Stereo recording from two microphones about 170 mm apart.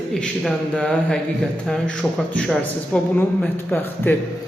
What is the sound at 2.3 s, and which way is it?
Speech, 5° left (ahead or behind).